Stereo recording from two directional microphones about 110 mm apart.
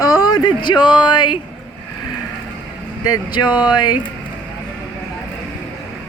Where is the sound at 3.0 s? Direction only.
40° left (ahead or behind).